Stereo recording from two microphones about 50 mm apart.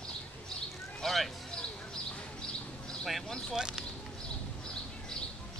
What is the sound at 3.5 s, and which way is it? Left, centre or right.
Speech, centre.